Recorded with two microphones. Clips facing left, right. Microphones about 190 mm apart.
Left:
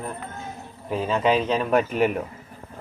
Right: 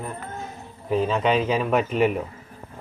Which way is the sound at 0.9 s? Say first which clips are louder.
Right 1 dB; centre (ahead or behind).